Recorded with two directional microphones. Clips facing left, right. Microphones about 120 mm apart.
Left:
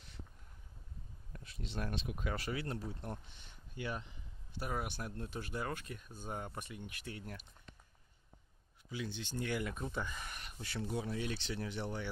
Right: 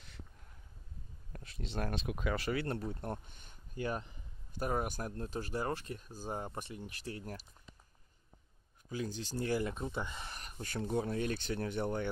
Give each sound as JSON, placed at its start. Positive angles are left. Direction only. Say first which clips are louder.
{"t": 1.8, "sound": "speech", "louder": "right 3 dB", "side_deg": -50}
{"t": 2.0, "sound": "speech", "louder": "right 4 dB", "side_deg": -85}
{"t": 8.9, "sound": "speech", "louder": "right 3 dB", "side_deg": -40}
{"t": 10.4, "sound": "speech", "louder": "right 4 dB", "side_deg": -45}